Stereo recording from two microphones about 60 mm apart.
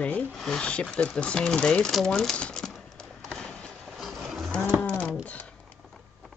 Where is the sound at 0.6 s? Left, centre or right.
Centre.